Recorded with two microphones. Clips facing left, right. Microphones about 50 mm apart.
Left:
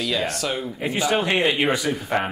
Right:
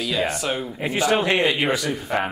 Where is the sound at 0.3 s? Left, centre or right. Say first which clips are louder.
Right 1 dB; centre.